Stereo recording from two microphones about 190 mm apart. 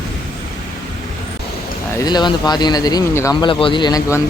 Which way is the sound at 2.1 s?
20° left (ahead or behind).